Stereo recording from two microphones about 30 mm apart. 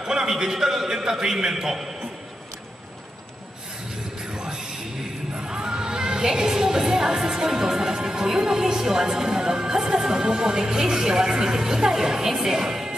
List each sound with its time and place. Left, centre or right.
0.0 s a sound: right
0.3 s speech: centre
4.3 s music: right
9.1 s speech: centre